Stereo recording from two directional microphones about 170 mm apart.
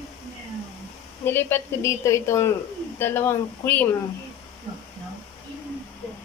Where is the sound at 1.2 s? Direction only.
15° left (ahead or behind).